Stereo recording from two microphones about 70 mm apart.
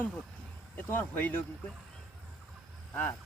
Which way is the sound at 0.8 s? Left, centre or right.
Left.